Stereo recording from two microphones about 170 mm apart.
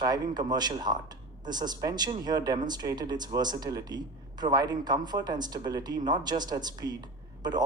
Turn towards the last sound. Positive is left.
turn(degrees=-25)  # may be behind; listen again after turning